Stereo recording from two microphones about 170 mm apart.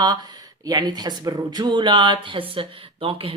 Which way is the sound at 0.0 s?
25° right (ahead or behind).